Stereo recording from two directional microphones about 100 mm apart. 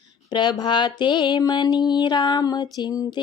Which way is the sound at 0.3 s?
50° left (ahead or behind).